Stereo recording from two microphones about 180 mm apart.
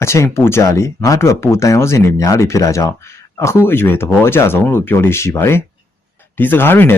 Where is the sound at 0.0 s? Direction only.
15° left (ahead or behind).